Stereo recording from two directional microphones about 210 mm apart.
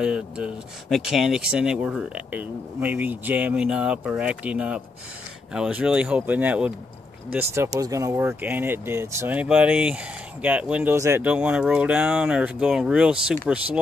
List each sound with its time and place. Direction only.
0.0 s speech: 5° right (ahead or behind)